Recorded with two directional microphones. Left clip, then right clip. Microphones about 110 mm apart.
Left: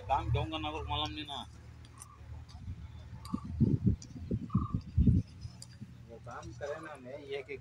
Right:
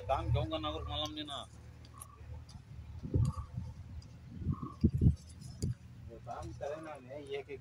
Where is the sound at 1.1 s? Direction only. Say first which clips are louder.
Left 1 dB; 50° right (ahead or behind).